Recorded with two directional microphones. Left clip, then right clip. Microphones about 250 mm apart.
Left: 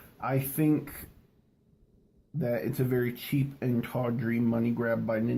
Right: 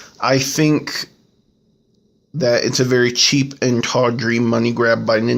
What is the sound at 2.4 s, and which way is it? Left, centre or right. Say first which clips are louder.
Speech: right 15 dB; right.